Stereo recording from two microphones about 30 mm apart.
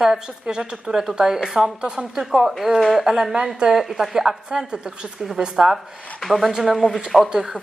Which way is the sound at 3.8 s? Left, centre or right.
Centre.